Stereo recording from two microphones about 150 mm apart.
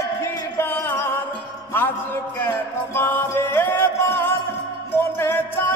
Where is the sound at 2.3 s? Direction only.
15° left (ahead or behind).